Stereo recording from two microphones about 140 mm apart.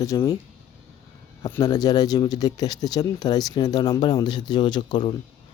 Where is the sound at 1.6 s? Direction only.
25° left (ahead or behind).